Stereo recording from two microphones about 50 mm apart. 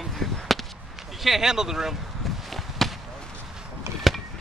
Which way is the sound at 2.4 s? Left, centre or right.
Centre.